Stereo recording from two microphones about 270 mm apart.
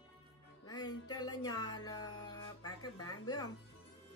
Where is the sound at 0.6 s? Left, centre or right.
Centre.